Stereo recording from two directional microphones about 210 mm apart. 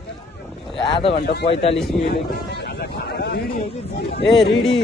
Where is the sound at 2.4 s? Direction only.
55° left (ahead or behind).